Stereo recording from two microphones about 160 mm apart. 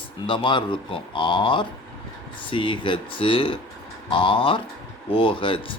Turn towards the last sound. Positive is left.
turn(degrees=30)  # may be behind; listen again after turning